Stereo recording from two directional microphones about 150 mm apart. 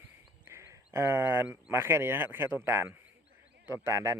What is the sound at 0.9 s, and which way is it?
A man's voice, 15° right (ahead or behind).